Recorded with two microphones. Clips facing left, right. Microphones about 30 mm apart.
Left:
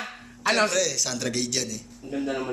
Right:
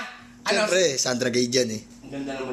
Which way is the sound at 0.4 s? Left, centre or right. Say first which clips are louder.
Right 2 dB; centre.